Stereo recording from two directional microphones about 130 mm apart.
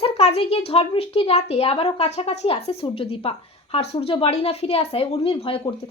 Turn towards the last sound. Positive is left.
turn(degrees=45)  # may be behind; listen again after turning